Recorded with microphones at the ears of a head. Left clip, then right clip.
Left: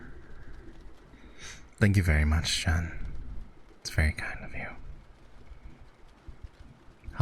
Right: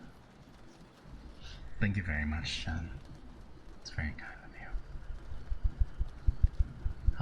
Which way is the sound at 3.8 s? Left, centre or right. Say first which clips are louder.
Left 10 dB; left.